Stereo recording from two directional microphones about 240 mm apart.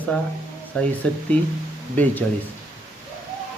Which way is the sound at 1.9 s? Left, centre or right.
Centre.